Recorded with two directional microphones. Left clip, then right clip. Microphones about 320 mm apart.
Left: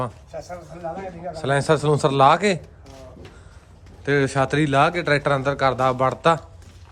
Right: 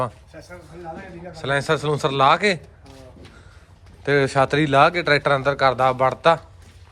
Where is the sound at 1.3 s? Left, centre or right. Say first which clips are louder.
Left 1 dB; centre.